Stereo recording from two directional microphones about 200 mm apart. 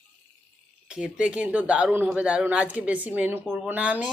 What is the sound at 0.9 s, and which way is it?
Speech, 5° right (ahead or behind).